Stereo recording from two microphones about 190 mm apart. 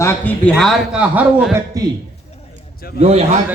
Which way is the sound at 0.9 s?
5° right (ahead or behind).